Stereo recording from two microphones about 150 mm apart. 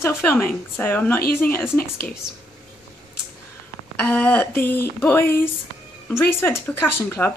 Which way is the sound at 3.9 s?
15° left (ahead or behind).